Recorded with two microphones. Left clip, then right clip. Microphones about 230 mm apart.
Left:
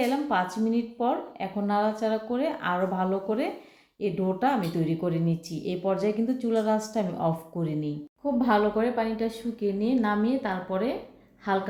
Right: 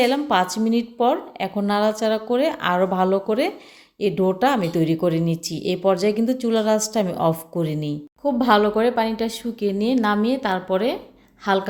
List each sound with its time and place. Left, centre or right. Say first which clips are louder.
0.0 s a woman's voice: right 7 dB; right